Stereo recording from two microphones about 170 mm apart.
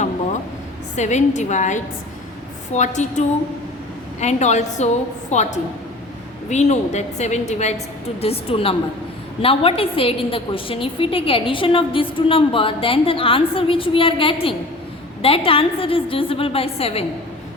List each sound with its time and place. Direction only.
0.9 s a woman's voice: 45° left (ahead or behind)